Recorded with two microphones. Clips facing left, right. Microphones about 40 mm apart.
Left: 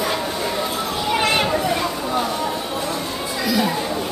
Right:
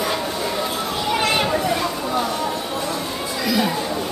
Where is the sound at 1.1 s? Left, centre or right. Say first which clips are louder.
Left 1 dB; centre.